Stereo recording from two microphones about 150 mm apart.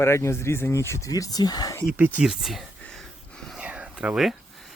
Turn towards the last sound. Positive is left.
turn(degrees=0)  # may be behind; listen again after turning